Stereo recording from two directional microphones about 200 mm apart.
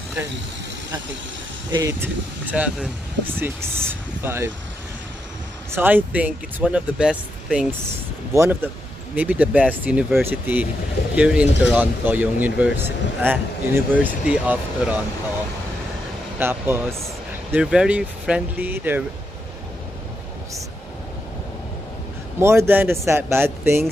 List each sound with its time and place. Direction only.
1.7 s speech: 15° right (ahead or behind)
5.7 s speech: 10° right (ahead or behind)
16.3 s speech: 10° right (ahead or behind)
22.4 s speech: 15° right (ahead or behind)